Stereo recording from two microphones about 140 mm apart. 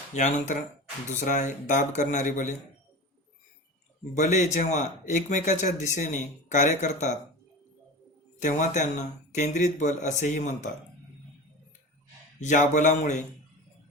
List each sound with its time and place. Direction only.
0.1 s speech: 60° left (ahead or behind)
4.1 s speech: 60° left (ahead or behind)
8.4 s speech: 60° left (ahead or behind)
12.4 s speech: 60° left (ahead or behind)